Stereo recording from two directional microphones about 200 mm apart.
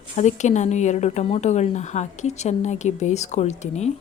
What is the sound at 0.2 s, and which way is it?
Speech, 35° left (ahead or behind).